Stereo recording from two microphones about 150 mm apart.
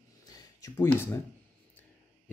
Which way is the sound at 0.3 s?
25° left (ahead or behind).